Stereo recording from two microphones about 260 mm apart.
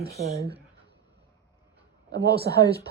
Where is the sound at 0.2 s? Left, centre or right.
Right.